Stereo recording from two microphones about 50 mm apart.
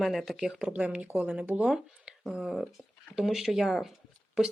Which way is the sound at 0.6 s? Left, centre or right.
Right.